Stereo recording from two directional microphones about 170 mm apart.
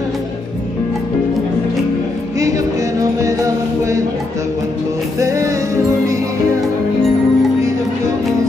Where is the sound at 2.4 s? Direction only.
20° right (ahead or behind).